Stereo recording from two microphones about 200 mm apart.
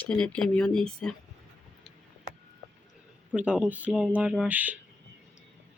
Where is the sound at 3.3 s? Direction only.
5° right (ahead or behind).